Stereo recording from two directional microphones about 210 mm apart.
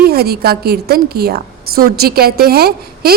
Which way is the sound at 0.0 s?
50° right (ahead or behind).